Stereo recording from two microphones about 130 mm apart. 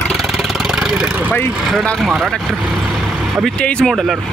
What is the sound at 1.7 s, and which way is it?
Speech, centre (ahead or behind).